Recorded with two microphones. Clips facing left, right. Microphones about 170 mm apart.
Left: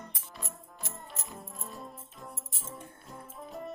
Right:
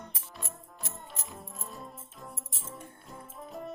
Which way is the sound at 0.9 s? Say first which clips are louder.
Even; centre (ahead or behind).